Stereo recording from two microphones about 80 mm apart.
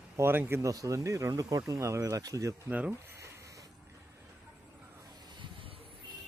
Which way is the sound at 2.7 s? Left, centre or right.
Centre.